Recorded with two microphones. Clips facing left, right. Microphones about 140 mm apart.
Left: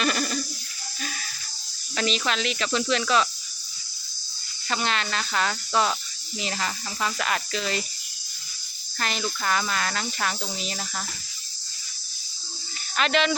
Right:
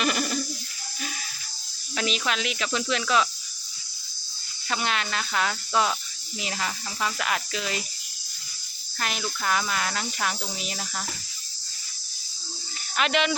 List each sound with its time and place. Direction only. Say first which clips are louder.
0.0 s a sound: even; 15° right (ahead or behind)
2.0 s speech: left 2 dB; 5° right (ahead or behind)
4.7 s speech: left 1 dB; 5° right (ahead or behind)
9.0 s cricket: left 2 dB; 5° right (ahead or behind)
13.0 s cricket: left 1 dB; 10° right (ahead or behind)